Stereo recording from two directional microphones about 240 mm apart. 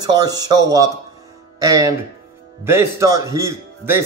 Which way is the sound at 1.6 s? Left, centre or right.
Centre.